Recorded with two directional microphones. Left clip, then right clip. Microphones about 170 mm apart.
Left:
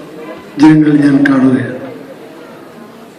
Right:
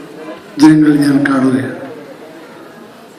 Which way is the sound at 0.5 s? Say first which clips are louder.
Left 1 dB; 35° right (ahead or behind).